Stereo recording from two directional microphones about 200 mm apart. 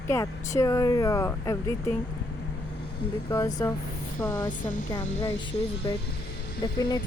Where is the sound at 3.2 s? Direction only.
15° left (ahead or behind).